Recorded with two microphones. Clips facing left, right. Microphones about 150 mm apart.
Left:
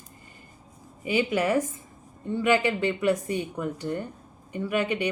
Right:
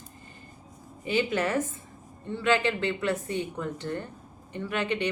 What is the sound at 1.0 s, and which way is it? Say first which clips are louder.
A woman's voice: left 2 dB; 10° left (ahead or behind).